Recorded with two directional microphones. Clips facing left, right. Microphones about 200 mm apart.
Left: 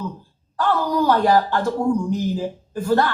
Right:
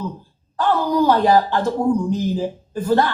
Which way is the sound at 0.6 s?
15° right (ahead or behind).